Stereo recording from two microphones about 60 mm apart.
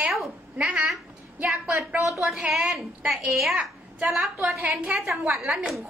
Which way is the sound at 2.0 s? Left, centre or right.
Centre.